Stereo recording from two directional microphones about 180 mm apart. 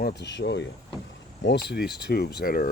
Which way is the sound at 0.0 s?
70° left (ahead or behind).